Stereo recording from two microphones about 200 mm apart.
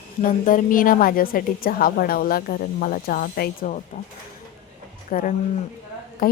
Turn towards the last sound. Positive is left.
turn(degrees=45)  # may be behind; listen again after turning